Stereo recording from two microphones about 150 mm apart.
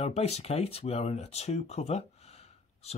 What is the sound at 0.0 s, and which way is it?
Speech, 45° left (ahead or behind).